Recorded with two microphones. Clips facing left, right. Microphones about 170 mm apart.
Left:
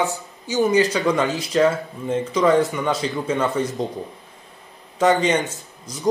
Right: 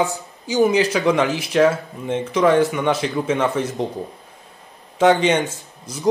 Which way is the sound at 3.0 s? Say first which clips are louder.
Right 2 dB; 85° right.